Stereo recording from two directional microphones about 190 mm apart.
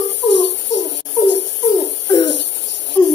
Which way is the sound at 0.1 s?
65° left (ahead or behind).